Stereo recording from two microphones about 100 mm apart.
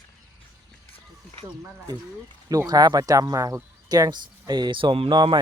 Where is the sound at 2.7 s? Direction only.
40° right (ahead or behind); by 5.1 s 60° right (ahead or behind).